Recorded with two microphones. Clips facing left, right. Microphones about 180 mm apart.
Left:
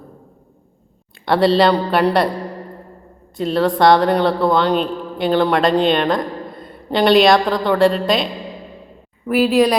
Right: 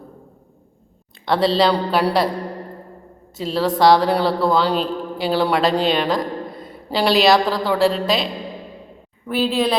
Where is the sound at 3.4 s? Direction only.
Centre (ahead or behind).